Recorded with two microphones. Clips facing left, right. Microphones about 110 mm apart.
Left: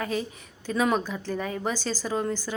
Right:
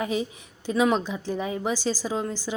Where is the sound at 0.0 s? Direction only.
15° right (ahead or behind).